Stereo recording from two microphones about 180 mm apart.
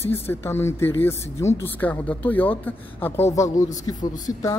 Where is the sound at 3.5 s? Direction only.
45° left (ahead or behind).